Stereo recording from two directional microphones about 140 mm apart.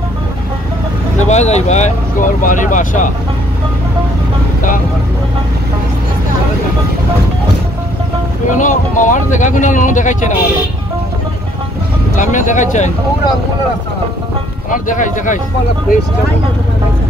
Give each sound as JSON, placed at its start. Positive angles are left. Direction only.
{"t": 1.2, "sound": "speech", "side_deg": 55}
{"t": 8.5, "sound": "speech", "side_deg": 65}
{"t": 12.2, "sound": "speech", "side_deg": 65}
{"t": 14.7, "sound": "speech", "side_deg": 65}